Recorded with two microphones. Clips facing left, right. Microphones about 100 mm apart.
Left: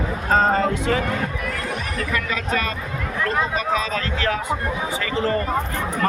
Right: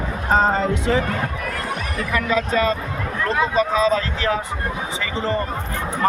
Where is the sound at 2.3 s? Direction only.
25° right (ahead or behind).